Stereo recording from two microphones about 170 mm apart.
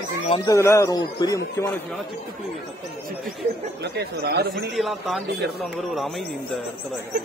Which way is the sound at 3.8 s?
80° right.